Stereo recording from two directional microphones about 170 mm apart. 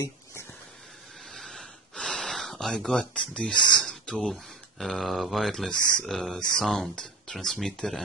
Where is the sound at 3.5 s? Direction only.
25° left (ahead or behind).